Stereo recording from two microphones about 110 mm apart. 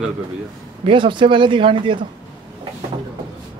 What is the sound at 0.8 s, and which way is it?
Speech, 45° right (ahead or behind).